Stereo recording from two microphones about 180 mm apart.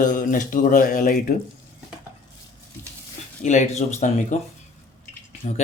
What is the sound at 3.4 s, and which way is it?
Speech, 40° left (ahead or behind).